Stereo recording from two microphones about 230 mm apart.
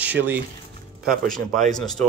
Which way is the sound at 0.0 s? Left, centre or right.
Centre.